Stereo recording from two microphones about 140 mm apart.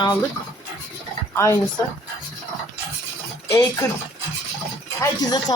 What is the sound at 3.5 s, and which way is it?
Speech, 20° left (ahead or behind).